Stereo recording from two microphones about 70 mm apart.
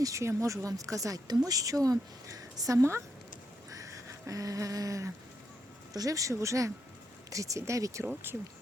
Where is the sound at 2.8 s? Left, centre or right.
Right.